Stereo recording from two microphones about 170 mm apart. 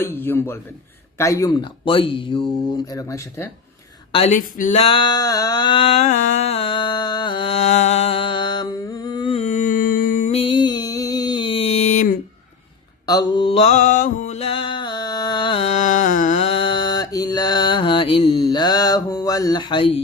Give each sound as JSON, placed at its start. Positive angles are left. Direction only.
{"t": 0.0, "sound": "speech", "side_deg": 15}
{"t": 4.1, "sound": "a woman's voice", "side_deg": 35}
{"t": 4.4, "sound": "male singing", "side_deg": 50}
{"t": 13.1, "sound": "mantra", "side_deg": 25}